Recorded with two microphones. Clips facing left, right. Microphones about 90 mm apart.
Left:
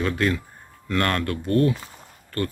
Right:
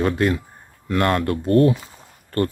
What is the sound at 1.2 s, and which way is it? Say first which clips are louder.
Speech: right 5 dB; 40° right (ahead or behind).